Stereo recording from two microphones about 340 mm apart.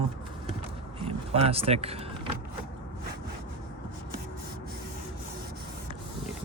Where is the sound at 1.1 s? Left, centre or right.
Centre.